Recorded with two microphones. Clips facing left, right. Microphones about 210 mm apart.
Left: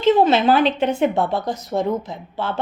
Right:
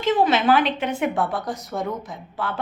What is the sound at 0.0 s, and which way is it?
Speech, 30° left (ahead or behind).